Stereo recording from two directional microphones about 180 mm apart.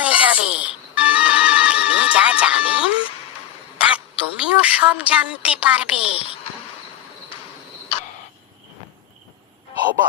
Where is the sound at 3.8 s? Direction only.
5° right (ahead or behind).